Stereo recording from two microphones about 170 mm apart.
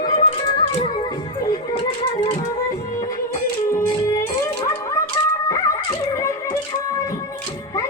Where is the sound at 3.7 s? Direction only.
15° left (ahead or behind).